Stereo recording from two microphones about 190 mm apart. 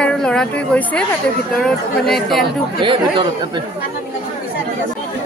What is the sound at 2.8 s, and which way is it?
Speech, 25° right (ahead or behind).